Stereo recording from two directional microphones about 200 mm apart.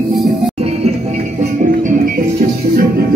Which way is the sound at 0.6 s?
30° right (ahead or behind).